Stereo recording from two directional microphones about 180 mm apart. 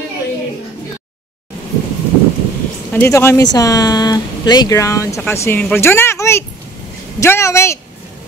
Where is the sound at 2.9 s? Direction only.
10° left (ahead or behind).